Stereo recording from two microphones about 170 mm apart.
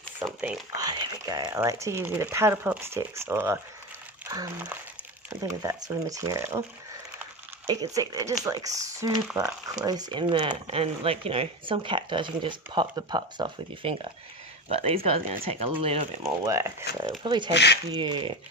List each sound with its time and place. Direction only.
0.8 s speech: 25° right (ahead or behind)
7.7 s speech: 20° right (ahead or behind)
16.5 s speech: 15° right (ahead or behind)
17.2 s speech: 25° right (ahead or behind)
17.5 s speech: 85° left
17.9 s speech: 25° right (ahead or behind)